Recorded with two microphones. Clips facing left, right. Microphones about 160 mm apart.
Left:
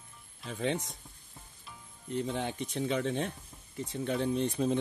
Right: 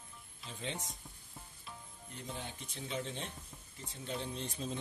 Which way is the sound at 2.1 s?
75° left (ahead or behind).